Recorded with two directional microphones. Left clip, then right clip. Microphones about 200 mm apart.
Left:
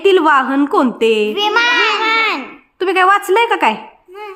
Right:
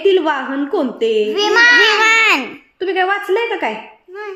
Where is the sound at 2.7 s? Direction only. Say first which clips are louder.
Left 5 dB; 40° left (ahead or behind).